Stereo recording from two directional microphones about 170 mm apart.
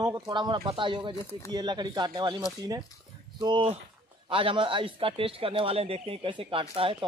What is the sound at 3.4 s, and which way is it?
A man's voice, 30° right (ahead or behind).